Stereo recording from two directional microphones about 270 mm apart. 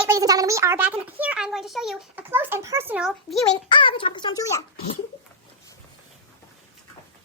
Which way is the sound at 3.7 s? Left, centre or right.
Centre.